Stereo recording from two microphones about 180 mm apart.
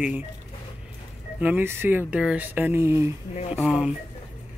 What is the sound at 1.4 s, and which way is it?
Speech, 10° right (ahead or behind).